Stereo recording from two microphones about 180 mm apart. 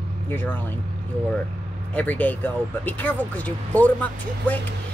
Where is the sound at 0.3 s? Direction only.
10° left (ahead or behind).